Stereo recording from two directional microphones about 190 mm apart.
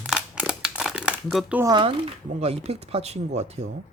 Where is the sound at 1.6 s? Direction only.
25° right (ahead or behind).